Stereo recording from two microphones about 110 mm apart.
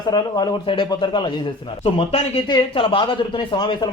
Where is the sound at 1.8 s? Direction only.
60° left (ahead or behind).